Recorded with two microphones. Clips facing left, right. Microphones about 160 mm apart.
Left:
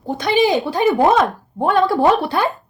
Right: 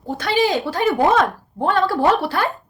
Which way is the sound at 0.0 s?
20° left (ahead or behind).